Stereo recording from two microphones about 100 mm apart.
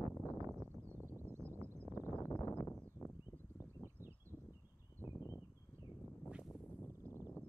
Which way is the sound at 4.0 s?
25° right (ahead or behind).